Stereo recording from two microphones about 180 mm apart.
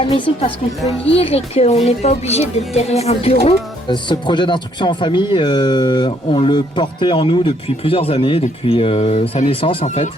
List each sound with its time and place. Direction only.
0.0 s a woman's voice: 30° left (ahead or behind)